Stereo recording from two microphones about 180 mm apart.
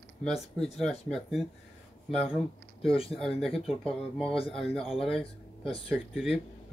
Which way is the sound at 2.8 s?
30° left (ahead or behind).